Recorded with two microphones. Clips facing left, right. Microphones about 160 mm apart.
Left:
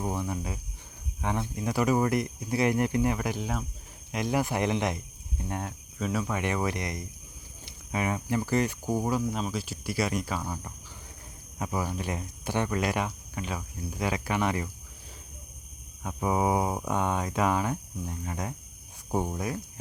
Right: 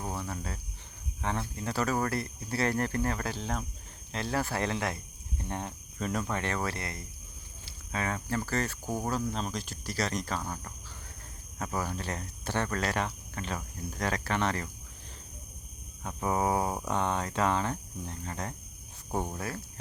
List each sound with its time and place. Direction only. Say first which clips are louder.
0.0 s speech: left 5 dB; 15° left (ahead or behind)
5.4 s speech: left 2 dB; 5° left (ahead or behind)
6.4 s speech: left 4 dB; 15° left (ahead or behind)
16.0 s speech: left 2 dB; 10° left (ahead or behind)